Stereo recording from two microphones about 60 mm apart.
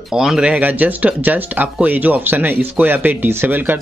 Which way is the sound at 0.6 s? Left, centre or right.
Right.